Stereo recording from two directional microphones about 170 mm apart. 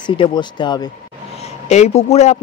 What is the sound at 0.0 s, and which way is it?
Speech, 25° left (ahead or behind).